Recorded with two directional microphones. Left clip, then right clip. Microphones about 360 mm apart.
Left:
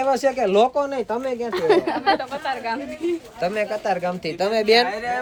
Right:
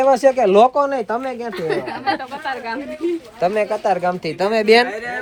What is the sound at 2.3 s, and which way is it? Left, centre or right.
Speech, centre.